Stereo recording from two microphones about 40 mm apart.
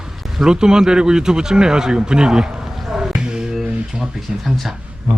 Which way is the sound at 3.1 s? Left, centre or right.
Right.